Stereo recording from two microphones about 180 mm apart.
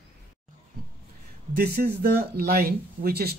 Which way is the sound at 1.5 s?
55° right (ahead or behind).